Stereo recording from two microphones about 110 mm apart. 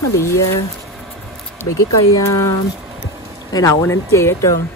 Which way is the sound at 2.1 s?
30° left (ahead or behind).